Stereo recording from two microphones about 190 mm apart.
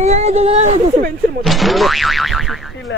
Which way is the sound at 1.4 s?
Centre (ahead or behind).